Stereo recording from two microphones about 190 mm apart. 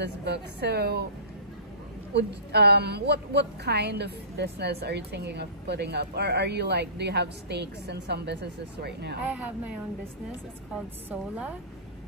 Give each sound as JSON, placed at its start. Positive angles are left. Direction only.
{"t": 0.0, "sound": "a woman's voice", "side_deg": -60}
{"t": 2.1, "sound": "a woman's voice", "side_deg": -60}
{"t": 11.1, "sound": "a woman's voice", "side_deg": -10}